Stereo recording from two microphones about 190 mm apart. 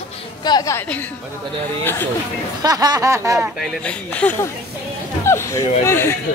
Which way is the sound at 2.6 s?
20° right (ahead or behind).